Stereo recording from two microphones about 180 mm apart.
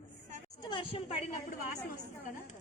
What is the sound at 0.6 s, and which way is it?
Speech, 25° left (ahead or behind).